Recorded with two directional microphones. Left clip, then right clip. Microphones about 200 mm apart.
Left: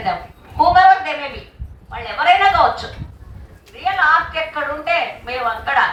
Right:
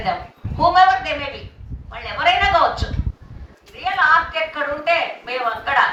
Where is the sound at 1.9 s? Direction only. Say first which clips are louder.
Left 4 dB; 55° right (ahead or behind).